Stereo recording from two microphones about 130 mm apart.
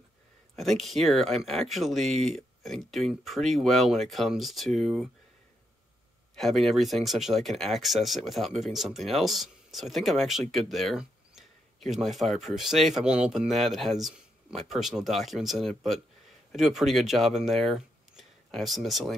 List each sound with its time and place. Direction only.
0.6 s speech: centre (ahead or behind)
6.3 s speech: centre (ahead or behind)